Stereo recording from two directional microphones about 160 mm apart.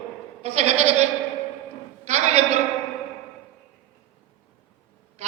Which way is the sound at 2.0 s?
45° right (ahead or behind).